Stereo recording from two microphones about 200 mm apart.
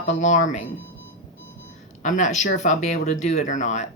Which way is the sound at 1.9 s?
40° left (ahead or behind).